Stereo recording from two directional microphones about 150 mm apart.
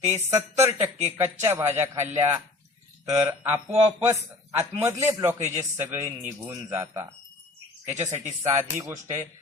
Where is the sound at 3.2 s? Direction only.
10° right (ahead or behind).